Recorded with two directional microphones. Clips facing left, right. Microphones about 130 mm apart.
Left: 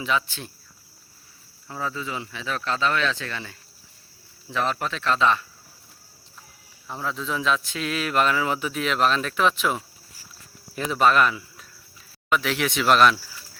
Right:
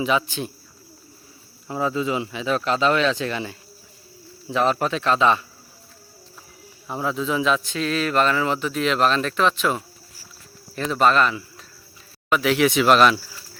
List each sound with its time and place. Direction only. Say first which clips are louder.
0.0 s speech: right 4 dB; 15° right (ahead or behind)
1.6 s speech: right 7 dB; 20° right (ahead or behind)
6.8 s a man's voice: right 5 dB; 15° right (ahead or behind)